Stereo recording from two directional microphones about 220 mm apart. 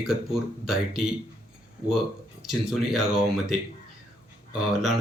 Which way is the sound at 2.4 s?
Centre (ahead or behind).